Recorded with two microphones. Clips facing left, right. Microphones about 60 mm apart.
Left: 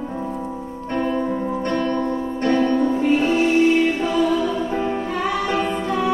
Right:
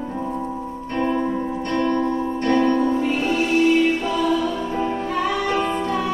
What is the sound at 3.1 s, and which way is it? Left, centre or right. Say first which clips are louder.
Music: left 3 dB; left.